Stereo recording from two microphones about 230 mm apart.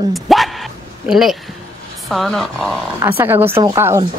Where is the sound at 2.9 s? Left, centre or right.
Centre.